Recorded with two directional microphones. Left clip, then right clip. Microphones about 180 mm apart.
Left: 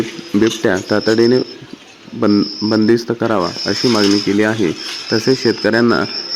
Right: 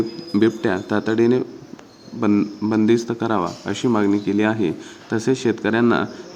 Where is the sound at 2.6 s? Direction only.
25° left (ahead or behind).